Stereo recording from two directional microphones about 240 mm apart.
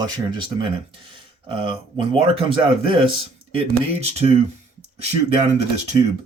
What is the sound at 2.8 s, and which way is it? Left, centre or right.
Speech, right.